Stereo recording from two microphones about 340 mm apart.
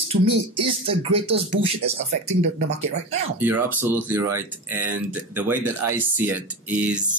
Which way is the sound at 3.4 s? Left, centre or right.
Centre.